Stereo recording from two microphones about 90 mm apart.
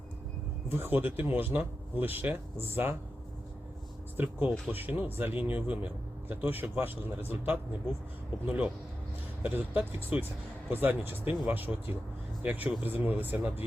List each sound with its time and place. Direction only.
0.7 s speech: 25° right (ahead or behind)
4.2 s speech: 20° right (ahead or behind)